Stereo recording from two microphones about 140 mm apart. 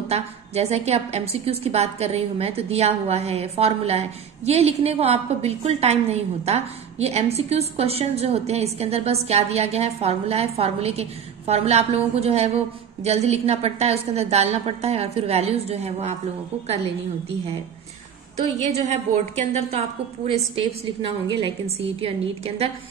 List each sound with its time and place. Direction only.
0.1 s a woman's voice: 50° right (ahead or behind)
18.4 s a woman's voice: 50° right (ahead or behind)
20.5 s a woman's voice: 40° right (ahead or behind)